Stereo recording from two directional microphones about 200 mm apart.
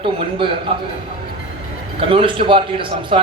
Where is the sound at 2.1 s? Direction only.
25° right (ahead or behind).